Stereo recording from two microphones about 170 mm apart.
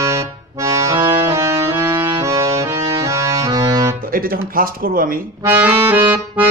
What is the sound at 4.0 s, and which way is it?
Music, 55° right (ahead or behind).